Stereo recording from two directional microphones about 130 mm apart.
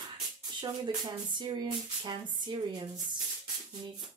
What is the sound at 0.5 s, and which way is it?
Speech, 35° right (ahead or behind).